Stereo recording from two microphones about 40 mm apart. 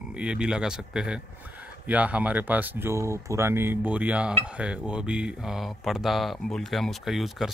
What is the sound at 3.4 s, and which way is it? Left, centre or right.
Speech, right.